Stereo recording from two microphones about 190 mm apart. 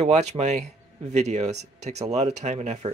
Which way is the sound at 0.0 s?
35° right (ahead or behind).